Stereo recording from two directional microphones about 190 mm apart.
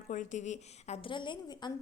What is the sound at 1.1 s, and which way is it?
Speech, 25° left (ahead or behind).